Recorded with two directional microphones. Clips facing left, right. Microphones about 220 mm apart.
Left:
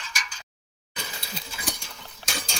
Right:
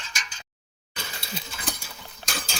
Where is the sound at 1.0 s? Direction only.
Centre (ahead or behind).